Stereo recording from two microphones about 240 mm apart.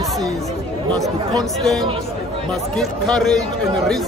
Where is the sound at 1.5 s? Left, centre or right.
Centre.